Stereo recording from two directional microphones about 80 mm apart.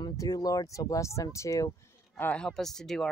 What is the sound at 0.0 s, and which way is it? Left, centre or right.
Speech, left.